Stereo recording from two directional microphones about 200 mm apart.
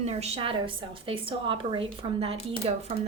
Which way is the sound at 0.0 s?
30° right (ahead or behind).